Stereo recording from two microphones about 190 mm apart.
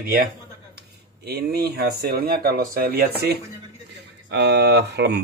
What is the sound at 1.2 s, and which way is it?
Speech, 55° right (ahead or behind).